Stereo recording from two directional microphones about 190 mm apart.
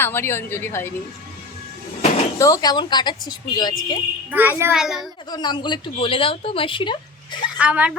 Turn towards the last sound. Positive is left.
turn(degrees=-5)  # may be behind; listen again after turning